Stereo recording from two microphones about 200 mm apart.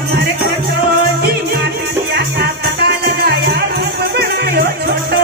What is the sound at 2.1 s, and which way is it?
Music, 50° right (ahead or behind).